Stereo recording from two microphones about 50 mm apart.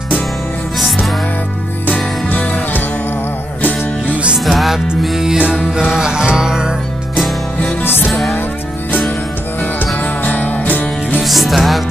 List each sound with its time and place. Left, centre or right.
0.7 s music: centre
2.2 s music: left
4.1 s music: right
4.5 s music: centre
8.1 s music: centre
10.2 s music: left
11.2 s music: centre